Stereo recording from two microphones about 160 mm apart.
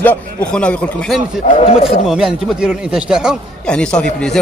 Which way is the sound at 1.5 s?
35° left (ahead or behind).